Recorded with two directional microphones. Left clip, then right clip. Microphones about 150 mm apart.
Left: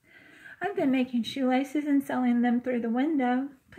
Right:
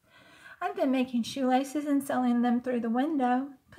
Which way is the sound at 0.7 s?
5° left (ahead or behind).